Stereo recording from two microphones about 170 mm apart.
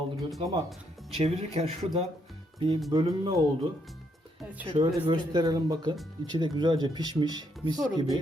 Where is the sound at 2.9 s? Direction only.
25° right (ahead or behind).